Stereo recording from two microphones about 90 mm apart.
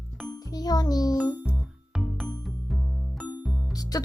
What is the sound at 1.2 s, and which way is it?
Music, 15° right (ahead or behind).